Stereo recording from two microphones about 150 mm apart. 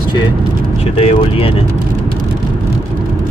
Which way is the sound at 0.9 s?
40° left (ahead or behind).